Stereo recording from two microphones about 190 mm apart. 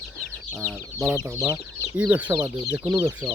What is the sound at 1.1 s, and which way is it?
Speech, 15° right (ahead or behind).